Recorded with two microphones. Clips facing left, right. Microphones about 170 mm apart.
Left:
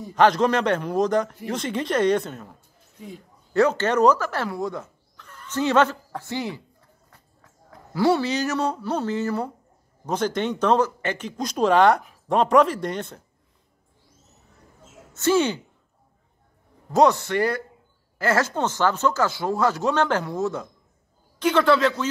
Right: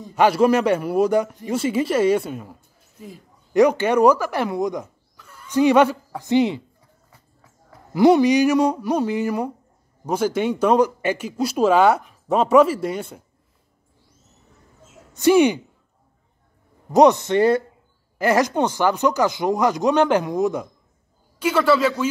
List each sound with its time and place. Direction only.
0.1 s speech: 10° right (ahead or behind)
3.5 s speech: 15° right (ahead or behind)
7.1 s a sound: 5° right (ahead or behind)
7.9 s speech: 15° right (ahead or behind)
15.1 s speech: 15° right (ahead or behind)
16.9 s speech: 20° right (ahead or behind)